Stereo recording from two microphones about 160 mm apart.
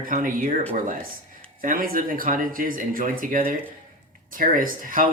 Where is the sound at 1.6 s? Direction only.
60° right (ahead or behind).